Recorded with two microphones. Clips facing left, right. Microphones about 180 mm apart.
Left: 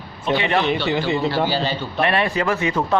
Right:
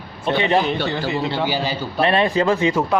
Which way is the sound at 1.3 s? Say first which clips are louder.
Left 1 dB; 15° right (ahead or behind).